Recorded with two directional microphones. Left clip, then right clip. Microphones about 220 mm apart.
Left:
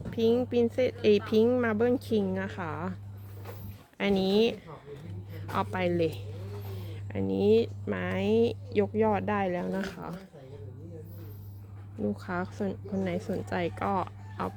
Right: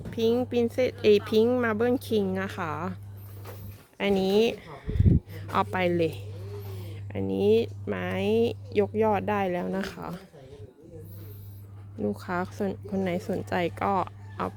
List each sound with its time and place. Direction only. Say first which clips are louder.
0.1 s speech: right 1 dB; 15° right (ahead or behind)
5.3 s speech: right 2 dB; 25° right (ahead or behind)
11.9 s speech: right 3 dB; 20° right (ahead or behind)